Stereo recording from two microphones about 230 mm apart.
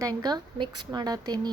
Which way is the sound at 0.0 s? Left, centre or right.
Centre.